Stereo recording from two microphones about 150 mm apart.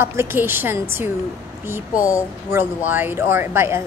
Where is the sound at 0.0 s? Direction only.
15° right (ahead or behind).